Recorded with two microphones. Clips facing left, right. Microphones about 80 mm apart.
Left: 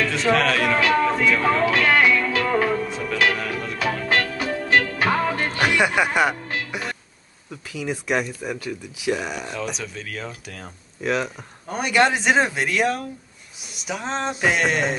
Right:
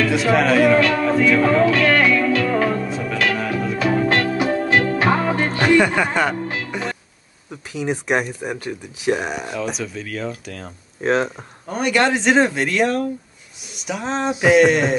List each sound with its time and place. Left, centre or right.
0.0 s speech: centre
0.7 s music: centre
4.3 s music: right
5.6 s speech: centre
6.7 s music: centre
8.1 s speech: right
9.5 s speech: centre
11.0 s speech: right
11.6 s speech: centre